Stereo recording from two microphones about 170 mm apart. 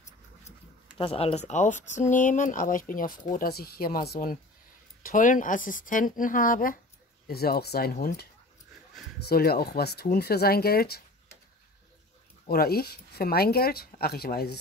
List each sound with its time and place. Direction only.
0.9 s speech: 35° left (ahead or behind); by 4.4 s 60° left (ahead or behind)
5.0 s speech: 50° left (ahead or behind)
7.2 s speech: 65° left (ahead or behind)
9.3 s speech: 65° left (ahead or behind)
12.4 s speech: 65° left (ahead or behind)